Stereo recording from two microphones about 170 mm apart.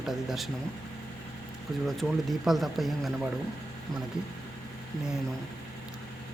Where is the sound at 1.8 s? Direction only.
Centre (ahead or behind).